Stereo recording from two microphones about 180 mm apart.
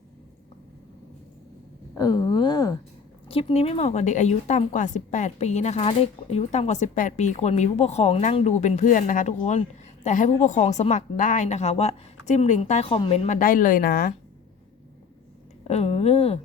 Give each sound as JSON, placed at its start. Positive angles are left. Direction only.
{"t": 2.0, "sound": "speech", "side_deg": 20}
{"t": 3.2, "sound": "a woman's voice", "side_deg": 35}
{"t": 15.6, "sound": "a woman's voice", "side_deg": 35}